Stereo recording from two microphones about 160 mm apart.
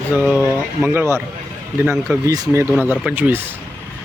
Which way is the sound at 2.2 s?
20° right (ahead or behind).